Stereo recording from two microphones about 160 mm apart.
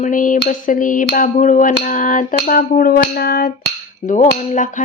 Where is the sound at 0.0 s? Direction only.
55° left (ahead or behind).